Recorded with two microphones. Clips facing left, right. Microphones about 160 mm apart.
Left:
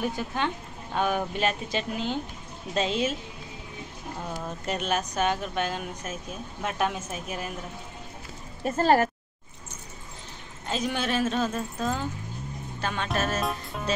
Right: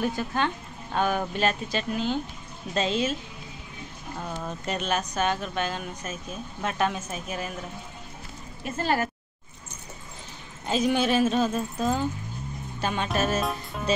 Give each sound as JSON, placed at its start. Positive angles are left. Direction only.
{"t": 0.0, "sound": "speech", "side_deg": 15}
{"t": 4.6, "sound": "speech", "side_deg": 10}
{"t": 8.6, "sound": "speech", "side_deg": 35}
{"t": 10.7, "sound": "speech", "side_deg": -5}